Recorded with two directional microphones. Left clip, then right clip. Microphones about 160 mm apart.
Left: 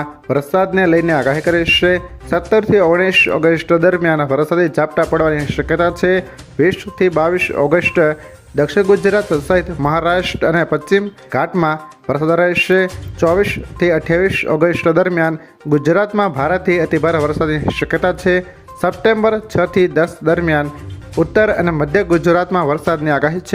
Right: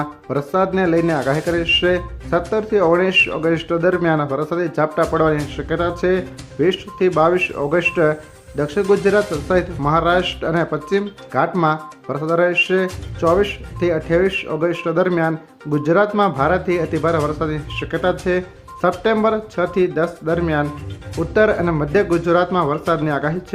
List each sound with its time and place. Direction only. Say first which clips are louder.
0.0 s speech: left 5 dB; 25° left (ahead or behind)